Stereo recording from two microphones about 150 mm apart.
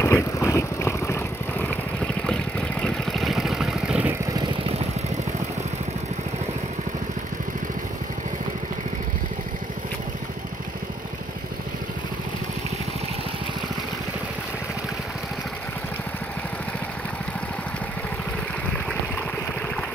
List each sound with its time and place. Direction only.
0.0 s vehicle: 20° left (ahead or behind)
2.8 s vehicle: centre (ahead or behind)